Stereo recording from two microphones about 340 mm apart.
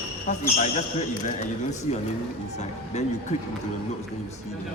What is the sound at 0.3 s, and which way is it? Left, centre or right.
Speech, left.